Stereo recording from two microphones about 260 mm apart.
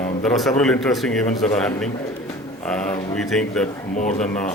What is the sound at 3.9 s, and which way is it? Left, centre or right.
Speech, left.